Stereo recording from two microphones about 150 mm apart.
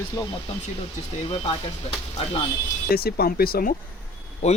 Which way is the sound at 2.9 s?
90° left.